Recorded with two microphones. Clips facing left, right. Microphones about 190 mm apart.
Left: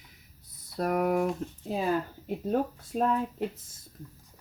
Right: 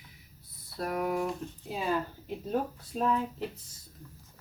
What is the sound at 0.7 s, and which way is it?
Speech, 50° left (ahead or behind).